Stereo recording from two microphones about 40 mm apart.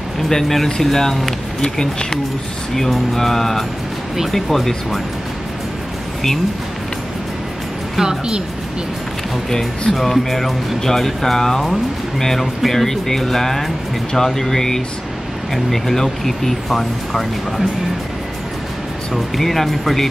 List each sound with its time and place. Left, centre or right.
0.3 s speech: centre
8.0 s speech: centre
9.5 s speech: centre
19.3 s speech: centre